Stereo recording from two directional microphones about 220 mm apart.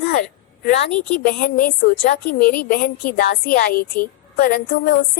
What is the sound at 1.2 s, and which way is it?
A woman's voice, 40° left (ahead or behind).